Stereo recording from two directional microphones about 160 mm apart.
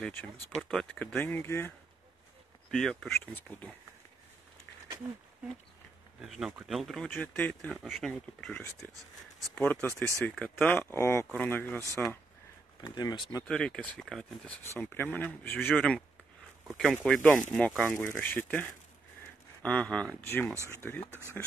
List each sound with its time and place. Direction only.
0.0 s speech: 10° left (ahead or behind)
2.7 s speech: 5° left (ahead or behind)
5.0 s speech: 15° right (ahead or behind)
6.2 s speech: centre (ahead or behind)
12.8 s speech: 25° left (ahead or behind)
13.4 s speech: 5° left (ahead or behind)
21.1 s speech: 15° right (ahead or behind)